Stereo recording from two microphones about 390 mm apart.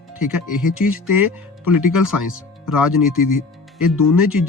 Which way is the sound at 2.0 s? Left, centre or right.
Left.